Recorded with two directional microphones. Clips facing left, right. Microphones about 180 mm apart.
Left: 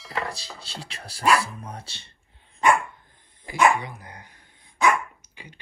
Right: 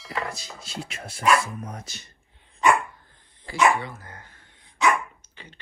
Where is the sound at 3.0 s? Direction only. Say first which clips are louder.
Even; 20° left (ahead or behind).